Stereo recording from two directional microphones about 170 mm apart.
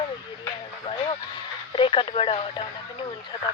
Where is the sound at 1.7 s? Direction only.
30° left (ahead or behind).